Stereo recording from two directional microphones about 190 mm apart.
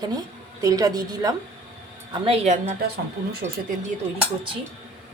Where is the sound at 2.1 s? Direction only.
30° right (ahead or behind).